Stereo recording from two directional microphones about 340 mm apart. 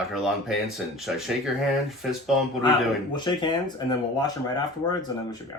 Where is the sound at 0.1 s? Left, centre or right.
Centre.